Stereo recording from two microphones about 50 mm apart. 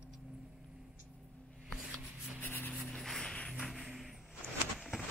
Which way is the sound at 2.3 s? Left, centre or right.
Left.